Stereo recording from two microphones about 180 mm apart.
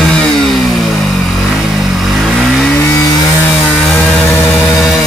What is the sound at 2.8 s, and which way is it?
Chainsaw, 15° left (ahead or behind).